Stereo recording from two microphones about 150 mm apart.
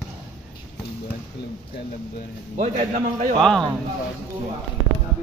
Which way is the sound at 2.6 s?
50° right (ahead or behind).